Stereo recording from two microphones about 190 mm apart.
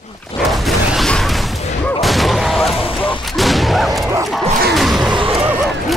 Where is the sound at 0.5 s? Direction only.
Centre (ahead or behind).